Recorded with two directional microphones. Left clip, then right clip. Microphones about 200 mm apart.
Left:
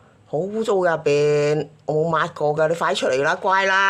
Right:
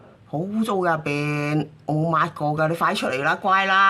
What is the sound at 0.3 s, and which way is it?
Speech, 20° left (ahead or behind).